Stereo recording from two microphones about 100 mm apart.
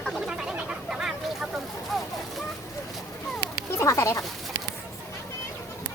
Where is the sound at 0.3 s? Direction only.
10° right (ahead or behind).